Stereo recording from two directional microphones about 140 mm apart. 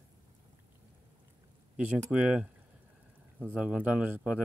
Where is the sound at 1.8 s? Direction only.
10° right (ahead or behind).